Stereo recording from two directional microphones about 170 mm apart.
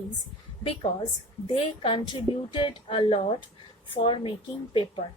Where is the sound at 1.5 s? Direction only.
35° left (ahead or behind).